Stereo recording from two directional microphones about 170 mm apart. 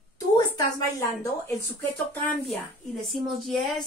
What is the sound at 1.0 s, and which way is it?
Speech, 15° left (ahead or behind).